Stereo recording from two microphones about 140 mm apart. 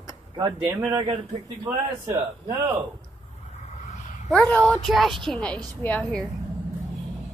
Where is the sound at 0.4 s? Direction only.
20° right (ahead or behind).